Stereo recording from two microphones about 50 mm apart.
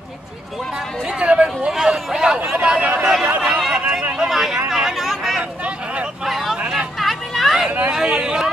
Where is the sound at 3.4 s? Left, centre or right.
Centre.